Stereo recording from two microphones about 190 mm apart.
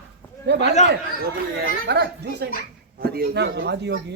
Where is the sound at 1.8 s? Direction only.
60° right (ahead or behind).